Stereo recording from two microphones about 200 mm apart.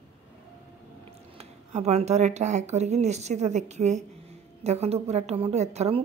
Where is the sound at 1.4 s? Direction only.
30° right (ahead or behind).